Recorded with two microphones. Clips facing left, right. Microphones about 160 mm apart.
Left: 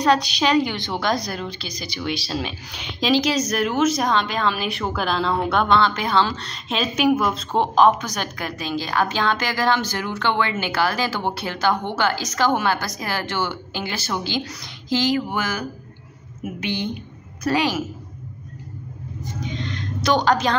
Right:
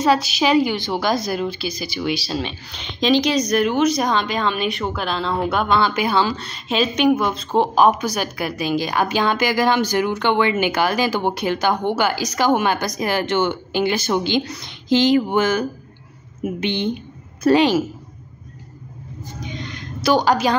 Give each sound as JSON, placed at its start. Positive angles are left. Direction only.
{"t": 0.0, "sound": "a woman's voice", "side_deg": -5}
{"t": 19.5, "sound": "a woman's voice", "side_deg": -10}